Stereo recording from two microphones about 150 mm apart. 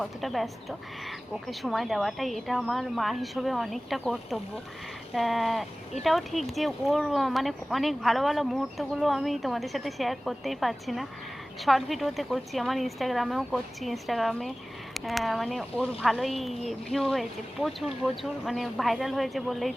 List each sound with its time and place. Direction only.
0.0 s speech: centre (ahead or behind)